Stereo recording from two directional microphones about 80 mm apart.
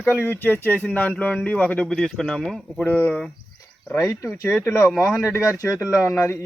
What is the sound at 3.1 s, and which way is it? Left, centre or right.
Speech, centre.